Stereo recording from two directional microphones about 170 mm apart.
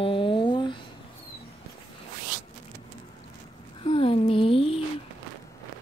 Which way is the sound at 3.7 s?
30° left (ahead or behind).